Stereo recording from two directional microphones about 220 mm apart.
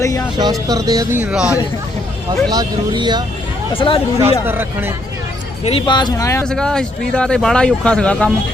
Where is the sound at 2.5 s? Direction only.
20° right (ahead or behind).